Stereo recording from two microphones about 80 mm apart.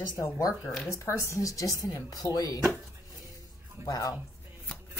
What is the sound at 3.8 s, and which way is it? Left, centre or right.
Speech, left.